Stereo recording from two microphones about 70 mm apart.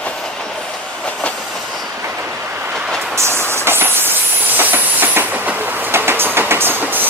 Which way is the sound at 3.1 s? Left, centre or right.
Right.